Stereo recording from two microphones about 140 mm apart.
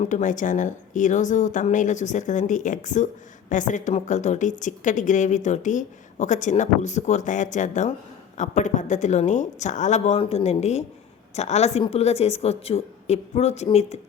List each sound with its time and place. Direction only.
0.0 s a woman's voice: 60° left (ahead or behind)
10.2 s a woman's voice: 45° left (ahead or behind)